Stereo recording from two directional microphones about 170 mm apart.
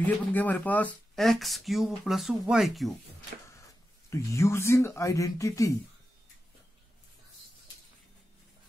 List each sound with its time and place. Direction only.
0.0 s speech: 10° left (ahead or behind)
4.1 s speech: 15° left (ahead or behind)